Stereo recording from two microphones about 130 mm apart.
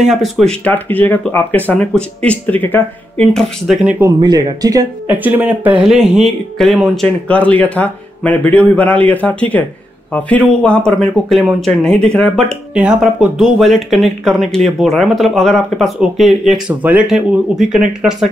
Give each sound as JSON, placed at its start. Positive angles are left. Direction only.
{"t": 0.0, "sound": "speech", "side_deg": 0}
{"t": 0.7, "sound": "speech", "side_deg": 15}
{"t": 3.6, "sound": "speech", "side_deg": 0}
{"t": 4.2, "sound": "speech", "side_deg": -35}
{"t": 5.0, "sound": "speech", "side_deg": -15}
{"t": 12.7, "sound": "speech", "side_deg": -5}